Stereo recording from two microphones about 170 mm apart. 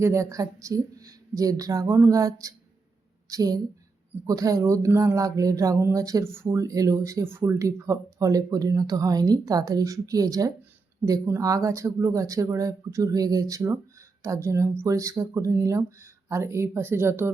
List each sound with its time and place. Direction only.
0.0 s speech: 15° right (ahead or behind)